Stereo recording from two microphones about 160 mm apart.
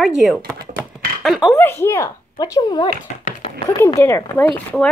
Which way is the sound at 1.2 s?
Centre (ahead or behind).